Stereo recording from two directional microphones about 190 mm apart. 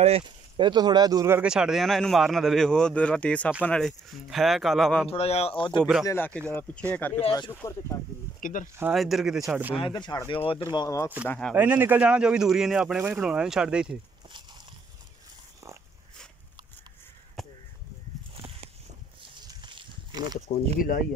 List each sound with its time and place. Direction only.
0.0 s speech: 30° right (ahead or behind); by 5.1 s centre (ahead or behind)
5.1 s speech: 35° left (ahead or behind)
5.8 s speech: centre (ahead or behind)
6.0 s speech: 10° left (ahead or behind)
7.2 s speech: 25° left (ahead or behind)
8.4 s speech: 45° left (ahead or behind)
8.9 s speech: centre (ahead or behind)
9.8 s speech: 25° left (ahead or behind)
11.2 s speech: 5° left (ahead or behind)
11.5 s speech: 10° right (ahead or behind)
17.4 s crow: centre (ahead or behind)
19.4 s livestock: 25° right (ahead or behind)